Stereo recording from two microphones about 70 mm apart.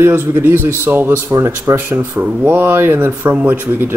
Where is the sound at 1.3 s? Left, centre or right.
Right.